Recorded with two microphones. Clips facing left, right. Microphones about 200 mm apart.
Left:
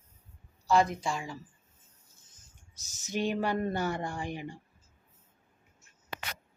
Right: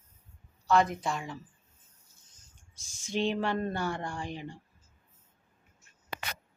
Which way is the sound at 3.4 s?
15° left (ahead or behind).